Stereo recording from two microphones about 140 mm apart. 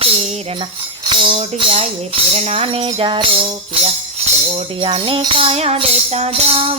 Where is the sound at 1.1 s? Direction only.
35° right (ahead or behind).